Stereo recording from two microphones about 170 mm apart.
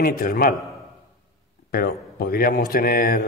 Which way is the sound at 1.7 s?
65° left (ahead or behind).